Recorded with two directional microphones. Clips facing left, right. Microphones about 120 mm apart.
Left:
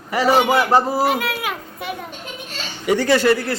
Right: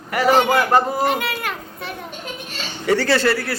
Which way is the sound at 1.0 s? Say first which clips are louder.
Left 1 dB; 5° left (ahead or behind).